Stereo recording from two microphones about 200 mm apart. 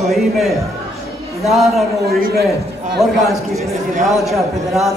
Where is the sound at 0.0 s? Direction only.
Centre (ahead or behind).